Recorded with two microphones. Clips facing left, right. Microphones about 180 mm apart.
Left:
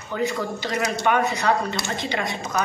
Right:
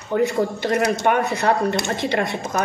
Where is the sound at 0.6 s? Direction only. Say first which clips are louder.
Right 6 dB; 60° right (ahead or behind).